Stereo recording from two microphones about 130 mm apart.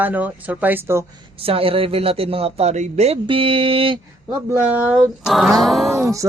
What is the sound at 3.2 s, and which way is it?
Speech, 45° right (ahead or behind).